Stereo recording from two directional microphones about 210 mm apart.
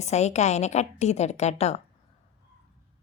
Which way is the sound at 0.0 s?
30° left (ahead or behind).